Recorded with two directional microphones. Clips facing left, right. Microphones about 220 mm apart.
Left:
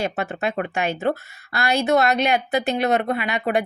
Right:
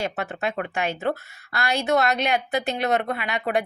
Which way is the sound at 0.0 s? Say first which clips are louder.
Left 3 dB; 10° left (ahead or behind).